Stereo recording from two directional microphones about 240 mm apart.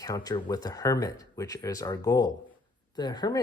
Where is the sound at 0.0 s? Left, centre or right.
Centre.